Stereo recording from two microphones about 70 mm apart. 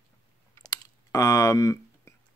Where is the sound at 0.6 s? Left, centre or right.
Left.